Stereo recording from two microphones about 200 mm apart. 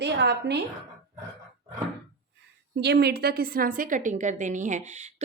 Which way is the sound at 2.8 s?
55° right (ahead or behind).